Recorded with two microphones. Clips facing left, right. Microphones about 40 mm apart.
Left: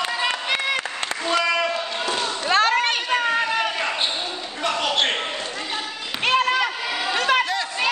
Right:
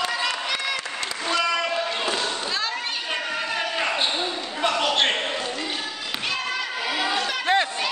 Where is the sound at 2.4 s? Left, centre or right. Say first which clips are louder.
Left 9 dB; left.